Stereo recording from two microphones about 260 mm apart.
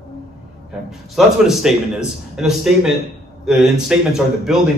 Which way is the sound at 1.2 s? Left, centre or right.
Centre.